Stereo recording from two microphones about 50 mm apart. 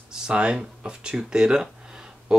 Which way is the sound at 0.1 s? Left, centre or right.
Centre.